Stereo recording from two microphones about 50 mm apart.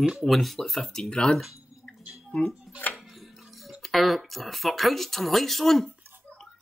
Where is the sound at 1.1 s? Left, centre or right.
Centre.